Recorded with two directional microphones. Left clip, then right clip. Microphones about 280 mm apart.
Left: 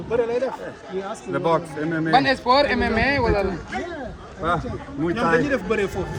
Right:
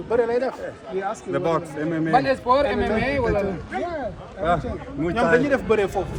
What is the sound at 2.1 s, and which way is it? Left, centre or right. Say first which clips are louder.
A man's voice: left 1 dB; left.